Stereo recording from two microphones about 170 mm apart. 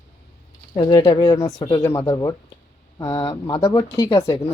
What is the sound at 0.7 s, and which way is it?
Speech, 25° left (ahead or behind).